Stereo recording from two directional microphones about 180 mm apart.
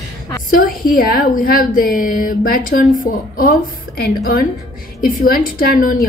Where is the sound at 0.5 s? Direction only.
50° left (ahead or behind).